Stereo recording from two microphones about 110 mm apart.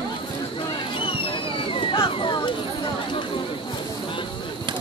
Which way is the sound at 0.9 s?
55° left (ahead or behind).